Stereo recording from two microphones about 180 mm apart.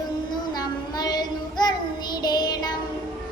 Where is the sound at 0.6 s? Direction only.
20° left (ahead or behind).